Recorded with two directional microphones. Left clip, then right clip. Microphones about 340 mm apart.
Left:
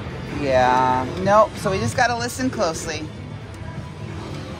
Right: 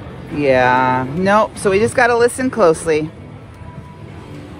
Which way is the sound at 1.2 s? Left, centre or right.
Right.